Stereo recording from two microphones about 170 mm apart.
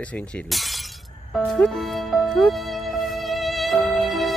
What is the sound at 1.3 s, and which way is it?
Music, centre (ahead or behind).